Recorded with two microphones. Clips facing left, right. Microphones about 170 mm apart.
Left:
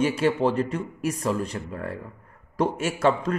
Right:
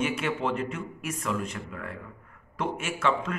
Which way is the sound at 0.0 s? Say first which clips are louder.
Left 7 dB; 35° left (ahead or behind).